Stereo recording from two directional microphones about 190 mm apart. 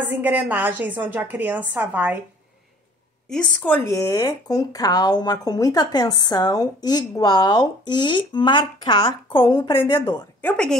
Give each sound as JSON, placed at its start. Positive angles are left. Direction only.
{"t": 0.0, "sound": "a woman's voice", "side_deg": -10}
{"t": 3.3, "sound": "speech", "side_deg": 5}
{"t": 10.4, "sound": "speech", "side_deg": 5}